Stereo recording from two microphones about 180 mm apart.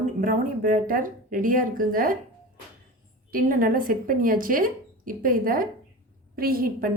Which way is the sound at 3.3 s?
50° right (ahead or behind).